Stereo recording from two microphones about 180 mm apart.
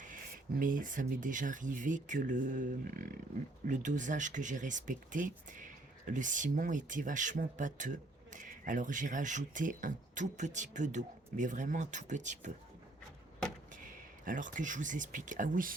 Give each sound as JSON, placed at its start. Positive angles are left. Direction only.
{"t": 0.6, "sound": "speech", "side_deg": -50}
{"t": 13.8, "sound": "speech", "side_deg": -45}